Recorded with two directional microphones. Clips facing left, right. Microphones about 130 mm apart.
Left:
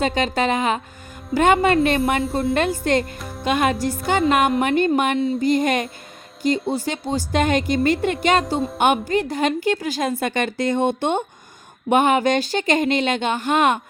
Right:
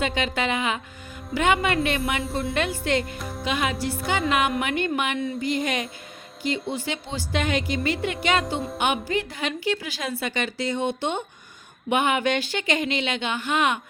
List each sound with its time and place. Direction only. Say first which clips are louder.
0.0 s a woman's voice: left 5 dB; 40° left (ahead or behind)
1.5 s speech: left 7 dB; 30° left (ahead or behind)
2.8 s speech: left 4 dB; 40° left (ahead or behind)
3.2 s music: even; centre (ahead or behind)
3.4 s a woman's voice: left 6 dB; 50° left (ahead or behind)
5.2 s speech: left 7 dB; 30° left (ahead or behind)
5.5 s a woman's voice: left 7 dB; 45° left (ahead or behind)